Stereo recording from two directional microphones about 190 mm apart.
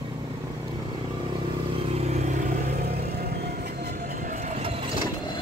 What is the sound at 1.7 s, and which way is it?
Vehicle, 30° right (ahead or behind).